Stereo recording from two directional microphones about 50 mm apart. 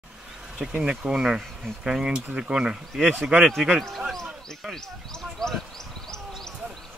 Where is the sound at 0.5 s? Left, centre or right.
Centre.